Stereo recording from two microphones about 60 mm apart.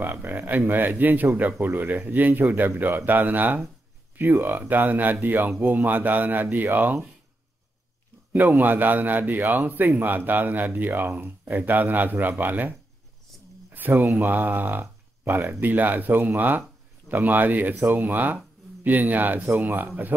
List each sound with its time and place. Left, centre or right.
0.0 s a man's voice: right
8.3 s a man's voice: right